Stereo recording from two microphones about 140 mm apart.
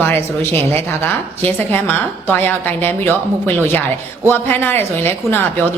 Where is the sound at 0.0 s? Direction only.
15° left (ahead or behind).